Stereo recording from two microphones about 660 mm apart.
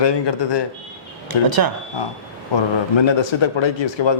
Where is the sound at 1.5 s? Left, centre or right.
Right.